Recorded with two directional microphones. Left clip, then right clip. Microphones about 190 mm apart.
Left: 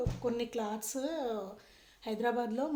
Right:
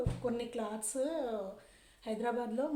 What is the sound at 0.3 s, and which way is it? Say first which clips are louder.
Speech: left 4 dB; 35° left (ahead or behind).